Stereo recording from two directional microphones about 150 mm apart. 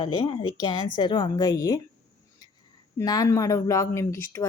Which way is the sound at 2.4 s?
25° left (ahead or behind).